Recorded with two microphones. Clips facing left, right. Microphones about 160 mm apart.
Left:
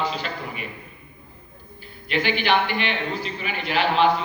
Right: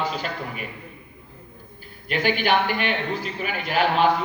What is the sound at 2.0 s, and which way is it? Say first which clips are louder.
A man's voice: even; 45° right (ahead or behind).